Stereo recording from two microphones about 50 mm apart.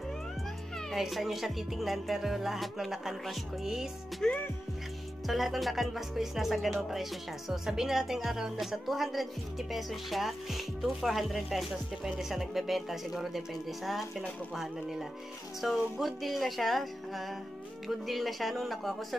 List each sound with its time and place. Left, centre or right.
0.9 s speech: centre
4.2 s music: centre
5.2 s speech: centre
17.8 s speech: centre